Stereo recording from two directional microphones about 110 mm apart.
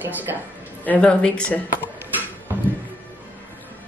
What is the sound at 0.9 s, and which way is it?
A woman's voice, 10° left (ahead or behind).